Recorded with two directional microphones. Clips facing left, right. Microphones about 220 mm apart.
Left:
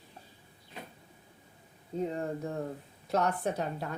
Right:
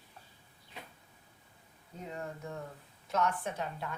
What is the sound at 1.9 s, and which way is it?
Speech, 35° left (ahead or behind).